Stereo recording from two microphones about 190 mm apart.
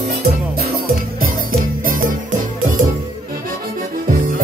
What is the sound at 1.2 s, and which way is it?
Music, 50° right (ahead or behind).